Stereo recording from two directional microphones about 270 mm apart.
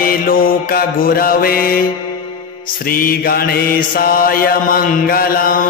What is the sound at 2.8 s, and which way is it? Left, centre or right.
Mantra, left.